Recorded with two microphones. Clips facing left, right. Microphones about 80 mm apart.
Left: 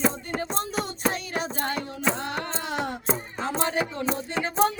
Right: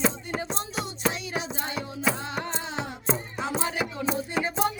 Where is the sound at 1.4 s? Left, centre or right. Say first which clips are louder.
Left 4 dB; left.